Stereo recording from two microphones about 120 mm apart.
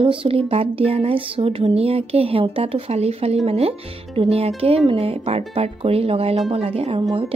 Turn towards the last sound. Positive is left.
turn(degrees=-55)  # may be behind; listen again after turning